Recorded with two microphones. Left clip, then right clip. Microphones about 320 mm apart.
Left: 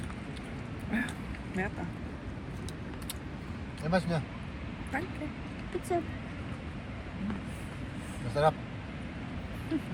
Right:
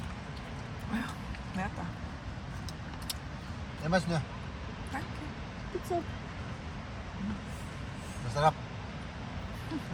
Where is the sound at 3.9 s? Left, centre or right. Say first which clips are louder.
Even; centre.